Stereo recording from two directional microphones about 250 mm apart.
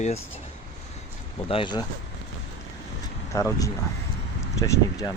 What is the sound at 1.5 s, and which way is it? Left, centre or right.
Speech, centre.